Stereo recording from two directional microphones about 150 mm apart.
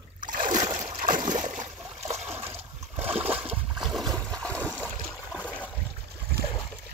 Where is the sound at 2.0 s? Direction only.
45° right (ahead or behind).